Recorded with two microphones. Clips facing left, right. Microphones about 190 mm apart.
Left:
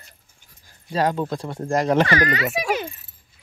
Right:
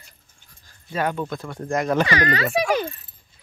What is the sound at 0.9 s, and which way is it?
Speech, 30° left (ahead or behind).